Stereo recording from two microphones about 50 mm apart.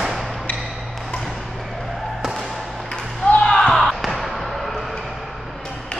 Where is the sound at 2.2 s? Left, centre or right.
Centre.